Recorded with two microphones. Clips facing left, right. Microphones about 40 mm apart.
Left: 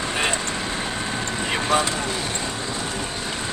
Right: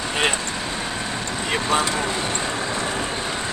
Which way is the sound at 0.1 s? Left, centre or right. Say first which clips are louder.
Right 3 dB; right.